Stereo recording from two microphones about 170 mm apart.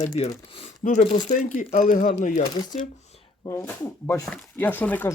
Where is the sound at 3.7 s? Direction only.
10° left (ahead or behind).